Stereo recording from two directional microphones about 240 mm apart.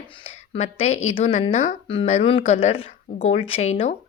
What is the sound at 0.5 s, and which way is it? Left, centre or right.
Speech, left.